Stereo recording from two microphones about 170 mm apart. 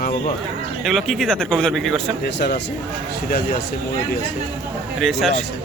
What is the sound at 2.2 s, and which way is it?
Speech, 80° left.